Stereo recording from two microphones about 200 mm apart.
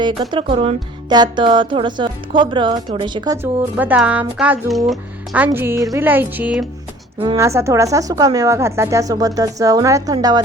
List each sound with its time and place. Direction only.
0.0 s speech: 25° right (ahead or behind)
3.3 s speech: 10° right (ahead or behind)